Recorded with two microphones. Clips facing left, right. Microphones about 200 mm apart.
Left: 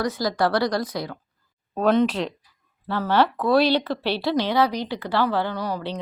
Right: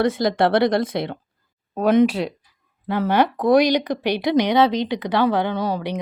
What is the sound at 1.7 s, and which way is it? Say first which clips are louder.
Speech: right 3 dB; 15° right (ahead or behind).